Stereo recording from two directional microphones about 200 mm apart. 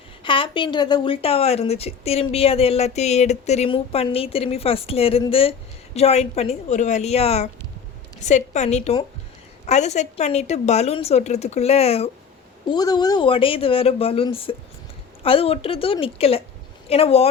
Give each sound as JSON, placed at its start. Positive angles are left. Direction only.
{"t": 0.2, "sound": "a woman's voice", "side_deg": 25}
{"t": 12.7, "sound": "speech", "side_deg": 20}